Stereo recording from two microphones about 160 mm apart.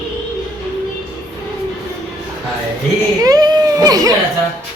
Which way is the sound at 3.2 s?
25° right (ahead or behind).